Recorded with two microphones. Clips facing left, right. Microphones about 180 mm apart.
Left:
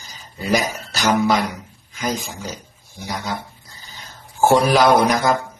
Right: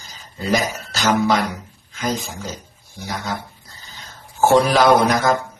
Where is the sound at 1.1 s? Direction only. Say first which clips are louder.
Even; 10° left (ahead or behind).